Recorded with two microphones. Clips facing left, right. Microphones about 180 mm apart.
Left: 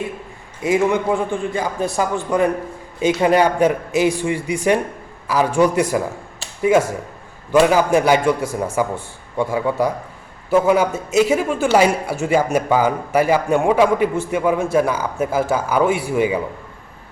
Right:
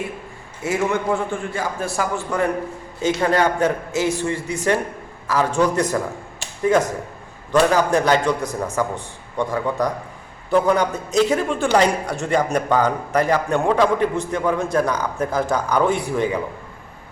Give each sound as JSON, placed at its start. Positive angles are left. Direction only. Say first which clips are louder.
{"t": 0.6, "sound": "speech", "louder": "left 4 dB", "side_deg": 15}